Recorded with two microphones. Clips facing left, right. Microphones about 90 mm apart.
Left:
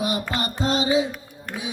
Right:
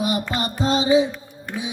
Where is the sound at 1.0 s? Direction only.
5° left (ahead or behind).